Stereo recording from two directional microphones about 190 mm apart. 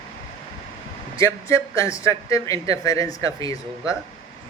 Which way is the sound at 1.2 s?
15° left (ahead or behind).